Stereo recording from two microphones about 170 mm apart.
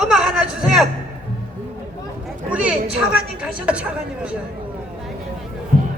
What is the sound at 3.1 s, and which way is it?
Speech, 5° right (ahead or behind).